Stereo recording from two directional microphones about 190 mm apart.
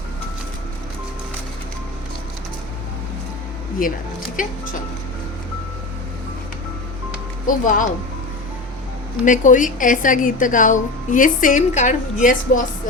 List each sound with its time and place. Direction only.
3.8 s a woman's voice: 50° left (ahead or behind)
7.4 s a woman's voice: 45° left (ahead or behind)
9.2 s a woman's voice: 45° left (ahead or behind)